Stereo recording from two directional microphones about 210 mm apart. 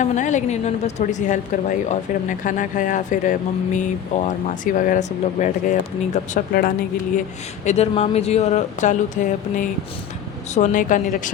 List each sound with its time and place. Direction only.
0.0 s speech: 35° left (ahead or behind)
2.4 s speech: 40° left (ahead or behind)
7.6 s speech: 30° left (ahead or behind)